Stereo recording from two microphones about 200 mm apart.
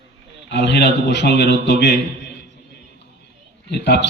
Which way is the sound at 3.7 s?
55° left (ahead or behind).